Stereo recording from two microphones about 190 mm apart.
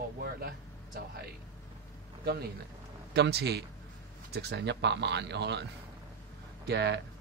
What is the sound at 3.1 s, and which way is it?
Speech, 60° right (ahead or behind).